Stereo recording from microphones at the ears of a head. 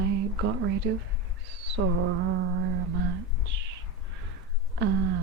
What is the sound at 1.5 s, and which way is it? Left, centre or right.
Mantra, right.